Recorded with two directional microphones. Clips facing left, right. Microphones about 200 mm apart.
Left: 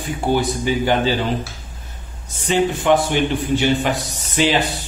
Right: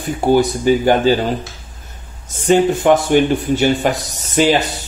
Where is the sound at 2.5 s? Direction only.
45° right (ahead or behind).